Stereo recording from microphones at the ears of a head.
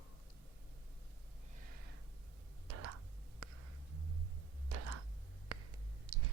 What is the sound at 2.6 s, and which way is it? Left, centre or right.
Whispering, right.